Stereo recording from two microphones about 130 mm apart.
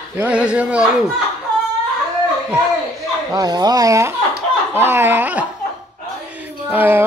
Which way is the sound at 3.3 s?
30° right (ahead or behind).